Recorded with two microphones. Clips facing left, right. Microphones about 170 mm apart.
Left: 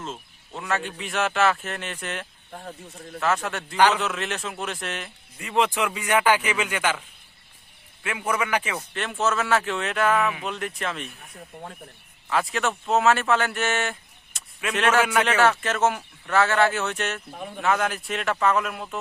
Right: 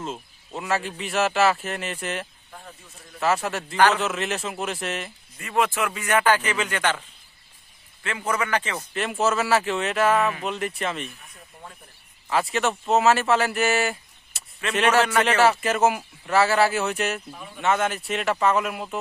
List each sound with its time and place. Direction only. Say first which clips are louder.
0.0 s speech: right 3 dB; 10° right (ahead or behind)
5.4 s speech: even; 15° left (ahead or behind)
8.0 s speech: even; 10° left (ahead or behind)
8.9 s speech: right 3 dB; 5° right (ahead or behind)
11.3 s speech: left 5 dB; 45° left (ahead or behind)
12.3 s a man's voice: right 2 dB; centre (ahead or behind)
17.3 s speech: left 5 dB; 55° left (ahead or behind)
17.6 s speech: right 1 dB; centre (ahead or behind)